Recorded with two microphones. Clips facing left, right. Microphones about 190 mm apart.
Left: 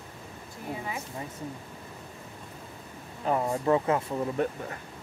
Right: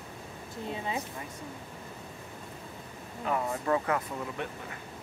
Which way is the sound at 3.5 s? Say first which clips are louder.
Left 5 dB; 25° left (ahead or behind).